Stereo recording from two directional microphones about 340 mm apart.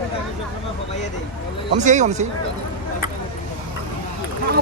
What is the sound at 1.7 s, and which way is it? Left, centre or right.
Speech, right.